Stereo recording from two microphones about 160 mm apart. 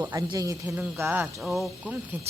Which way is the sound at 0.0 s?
20° right (ahead or behind).